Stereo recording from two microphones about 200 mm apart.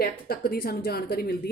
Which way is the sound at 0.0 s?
50° left (ahead or behind).